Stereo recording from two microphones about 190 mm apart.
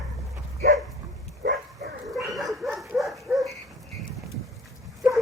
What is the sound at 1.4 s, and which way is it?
Dog, 55° right (ahead or behind).